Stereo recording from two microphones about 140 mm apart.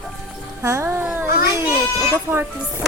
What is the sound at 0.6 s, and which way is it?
Music, 20° right (ahead or behind).